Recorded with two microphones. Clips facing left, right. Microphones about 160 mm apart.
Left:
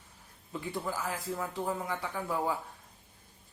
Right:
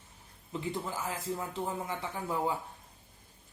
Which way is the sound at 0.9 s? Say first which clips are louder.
Left 1 dB; 20° right (ahead or behind).